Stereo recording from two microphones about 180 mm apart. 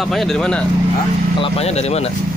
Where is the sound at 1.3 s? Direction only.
30° left (ahead or behind).